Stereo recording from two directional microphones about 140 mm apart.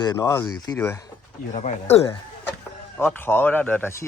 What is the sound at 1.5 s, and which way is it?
Speech, 55° left (ahead or behind).